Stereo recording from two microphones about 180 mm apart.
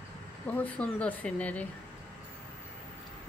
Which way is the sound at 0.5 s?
10° left (ahead or behind).